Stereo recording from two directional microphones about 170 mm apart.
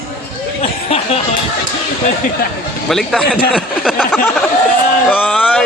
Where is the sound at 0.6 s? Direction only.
35° left (ahead or behind).